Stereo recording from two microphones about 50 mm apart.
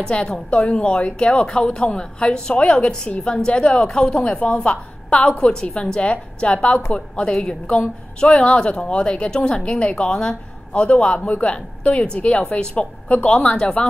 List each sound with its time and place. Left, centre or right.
0.1 s a woman's voice: centre